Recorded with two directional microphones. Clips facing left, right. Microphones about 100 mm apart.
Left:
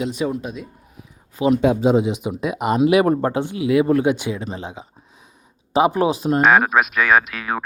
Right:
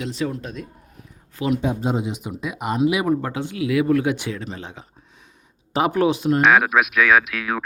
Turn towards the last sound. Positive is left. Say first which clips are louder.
# left 1 dB
turn(degrees=0)  # may be behind; listen again after turning